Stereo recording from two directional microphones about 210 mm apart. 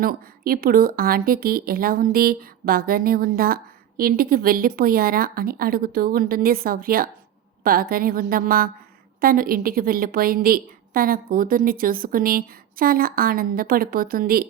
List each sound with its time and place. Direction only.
0.0 s speech: 45° right (ahead or behind)